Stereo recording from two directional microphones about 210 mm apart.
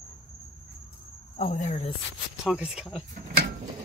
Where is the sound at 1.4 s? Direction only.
35° left (ahead or behind).